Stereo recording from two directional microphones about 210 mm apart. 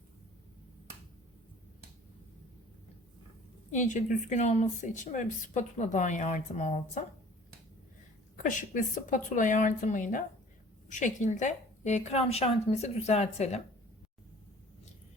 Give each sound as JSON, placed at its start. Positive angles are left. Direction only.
{"t": 3.7, "sound": "speech", "side_deg": 35}
{"t": 8.4, "sound": "speech", "side_deg": 40}